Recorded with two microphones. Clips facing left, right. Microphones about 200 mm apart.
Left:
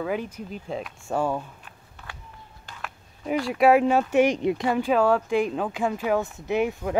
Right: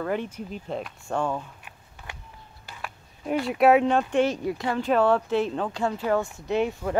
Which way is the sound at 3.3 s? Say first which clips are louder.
Even; centre (ahead or behind).